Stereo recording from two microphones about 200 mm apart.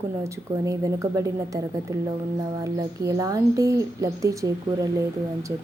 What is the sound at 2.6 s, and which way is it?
A woman's voice, 15° right (ahead or behind).